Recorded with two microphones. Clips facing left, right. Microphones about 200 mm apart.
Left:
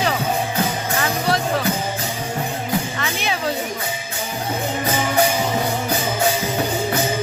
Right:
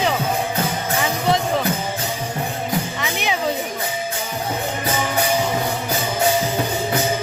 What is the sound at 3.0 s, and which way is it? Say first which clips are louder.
Music: right 1 dB; 15° right (ahead or behind).